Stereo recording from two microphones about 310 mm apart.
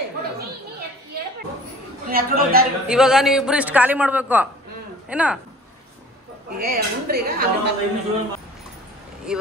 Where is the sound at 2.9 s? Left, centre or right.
Centre.